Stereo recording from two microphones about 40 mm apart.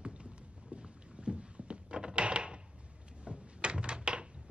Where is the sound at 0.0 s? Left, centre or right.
Right.